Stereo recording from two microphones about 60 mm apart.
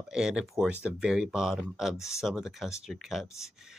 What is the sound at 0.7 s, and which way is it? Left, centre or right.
Speech, centre.